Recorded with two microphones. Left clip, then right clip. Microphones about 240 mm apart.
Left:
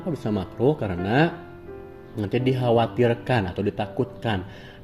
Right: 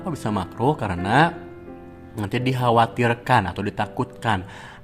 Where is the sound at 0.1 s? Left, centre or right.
Right.